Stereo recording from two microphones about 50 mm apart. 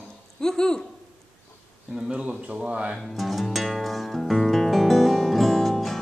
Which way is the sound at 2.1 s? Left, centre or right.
Right.